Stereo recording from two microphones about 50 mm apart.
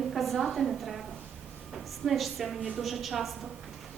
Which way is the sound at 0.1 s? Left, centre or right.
Centre.